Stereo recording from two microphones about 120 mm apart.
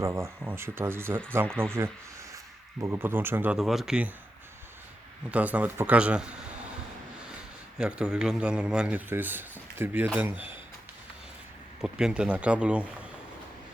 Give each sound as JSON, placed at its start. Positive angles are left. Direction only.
{"t": 0.0, "sound": "a man's voice", "side_deg": -20}
{"t": 3.6, "sound": "speech", "side_deg": -5}
{"t": 5.3, "sound": "a man's voice", "side_deg": -10}
{"t": 7.8, "sound": "a man's voice", "side_deg": -10}
{"t": 11.8, "sound": "a man's voice", "side_deg": -5}